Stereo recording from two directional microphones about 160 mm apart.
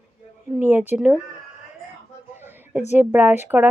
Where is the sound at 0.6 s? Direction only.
15° right (ahead or behind).